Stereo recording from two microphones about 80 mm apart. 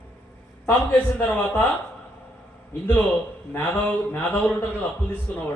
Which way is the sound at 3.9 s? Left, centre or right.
Centre.